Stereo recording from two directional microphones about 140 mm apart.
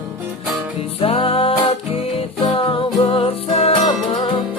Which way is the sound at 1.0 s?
40° left (ahead or behind).